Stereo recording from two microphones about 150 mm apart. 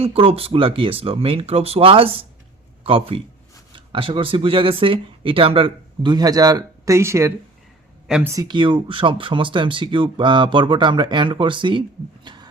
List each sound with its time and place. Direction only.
0.0 s speech: 40° right (ahead or behind); by 7.3 s 20° right (ahead or behind)
8.0 s speech: 5° right (ahead or behind)
8.3 s speech: 25° right (ahead or behind)
12.2 s heart sounds: 30° right (ahead or behind)